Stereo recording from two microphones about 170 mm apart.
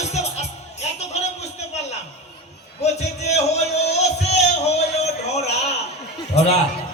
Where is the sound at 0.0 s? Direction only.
40° left (ahead or behind).